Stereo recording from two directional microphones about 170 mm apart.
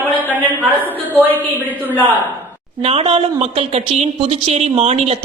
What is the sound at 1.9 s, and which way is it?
Speech, 10° left (ahead or behind).